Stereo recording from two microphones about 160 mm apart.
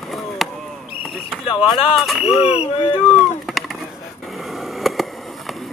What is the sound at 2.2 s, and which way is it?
Speech, 35° left (ahead or behind).